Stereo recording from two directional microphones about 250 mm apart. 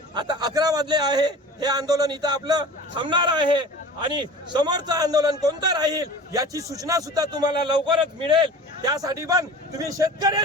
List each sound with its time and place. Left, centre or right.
0.1 s a man's voice: centre